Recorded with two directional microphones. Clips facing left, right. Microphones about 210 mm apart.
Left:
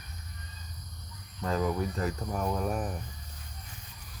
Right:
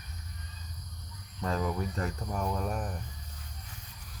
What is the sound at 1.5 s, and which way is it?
Speech, centre (ahead or behind).